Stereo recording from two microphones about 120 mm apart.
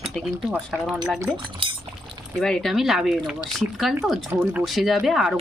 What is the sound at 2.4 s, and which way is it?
A woman's voice, 5° left (ahead or behind).